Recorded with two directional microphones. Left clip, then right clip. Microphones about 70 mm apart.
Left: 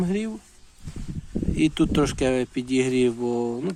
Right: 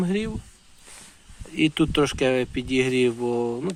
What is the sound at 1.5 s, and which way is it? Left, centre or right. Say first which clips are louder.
Speech: right 1 dB; centre.